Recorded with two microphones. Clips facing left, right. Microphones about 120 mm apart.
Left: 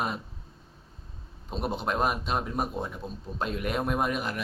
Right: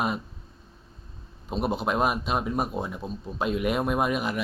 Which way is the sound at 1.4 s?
5° right (ahead or behind).